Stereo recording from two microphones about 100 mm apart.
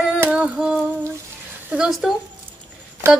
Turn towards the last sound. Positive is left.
turn(degrees=-25)  # may be behind; listen again after turning